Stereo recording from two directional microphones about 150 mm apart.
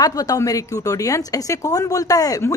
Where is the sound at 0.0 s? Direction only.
25° left (ahead or behind).